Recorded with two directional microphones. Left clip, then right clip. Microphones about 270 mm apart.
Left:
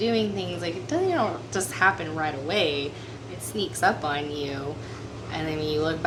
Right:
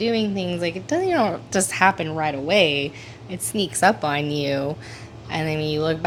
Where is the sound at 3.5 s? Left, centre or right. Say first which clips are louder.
Right 5 dB; right.